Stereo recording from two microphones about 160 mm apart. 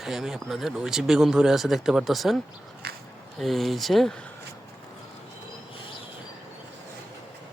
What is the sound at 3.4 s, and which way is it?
Speech, centre (ahead or behind).